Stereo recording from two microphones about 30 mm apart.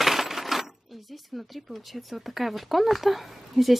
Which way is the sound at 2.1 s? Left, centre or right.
Centre.